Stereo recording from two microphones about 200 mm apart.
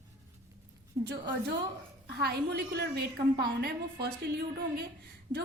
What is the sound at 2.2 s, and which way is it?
A woman's voice, 55° right (ahead or behind).